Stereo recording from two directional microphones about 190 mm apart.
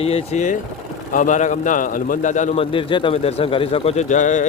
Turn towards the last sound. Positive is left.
turn(degrees=40)  # may be behind; listen again after turning